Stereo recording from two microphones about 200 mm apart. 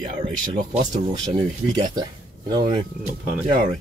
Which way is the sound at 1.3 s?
20° right (ahead or behind).